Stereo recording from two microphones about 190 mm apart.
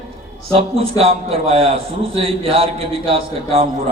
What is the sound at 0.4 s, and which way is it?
A man's voice, 30° right (ahead or behind).